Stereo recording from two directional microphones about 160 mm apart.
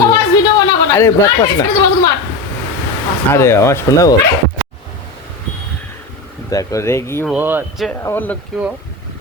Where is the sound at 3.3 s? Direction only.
15° left (ahead or behind).